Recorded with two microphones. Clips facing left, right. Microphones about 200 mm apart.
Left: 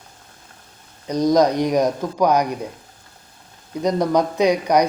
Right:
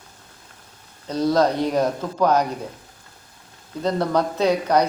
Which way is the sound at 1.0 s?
15° left (ahead or behind).